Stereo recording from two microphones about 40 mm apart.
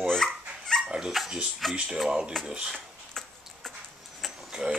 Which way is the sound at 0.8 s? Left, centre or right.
Centre.